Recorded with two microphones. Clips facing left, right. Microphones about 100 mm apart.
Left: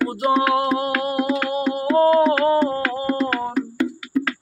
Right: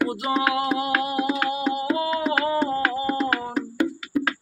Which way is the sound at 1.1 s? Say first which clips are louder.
Left 3 dB; 15° right (ahead or behind).